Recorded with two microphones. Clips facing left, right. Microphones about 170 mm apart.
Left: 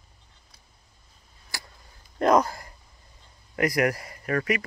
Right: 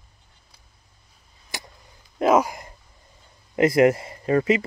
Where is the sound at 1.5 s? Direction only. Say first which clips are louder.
Right 4 dB; 20° right (ahead or behind).